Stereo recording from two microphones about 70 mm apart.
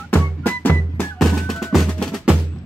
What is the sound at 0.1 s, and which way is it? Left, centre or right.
Music, left.